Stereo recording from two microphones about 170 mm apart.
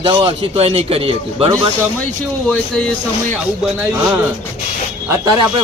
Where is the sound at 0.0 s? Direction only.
30° right (ahead or behind).